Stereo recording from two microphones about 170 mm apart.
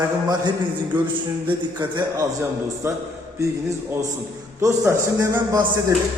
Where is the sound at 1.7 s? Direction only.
25° right (ahead or behind).